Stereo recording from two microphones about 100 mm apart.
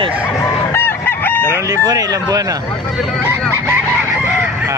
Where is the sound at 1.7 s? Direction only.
35° right (ahead or behind).